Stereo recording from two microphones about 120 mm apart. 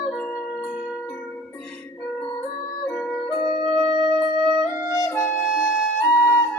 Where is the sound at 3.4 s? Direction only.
65° left (ahead or behind).